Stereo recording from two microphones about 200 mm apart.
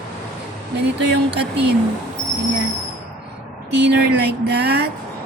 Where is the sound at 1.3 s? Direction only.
55° right (ahead or behind).